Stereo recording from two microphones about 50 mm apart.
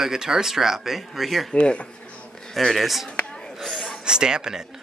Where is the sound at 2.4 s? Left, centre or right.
Centre.